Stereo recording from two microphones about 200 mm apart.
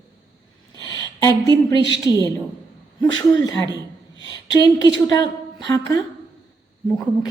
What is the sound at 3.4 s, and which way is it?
A woman's voice, 20° left (ahead or behind).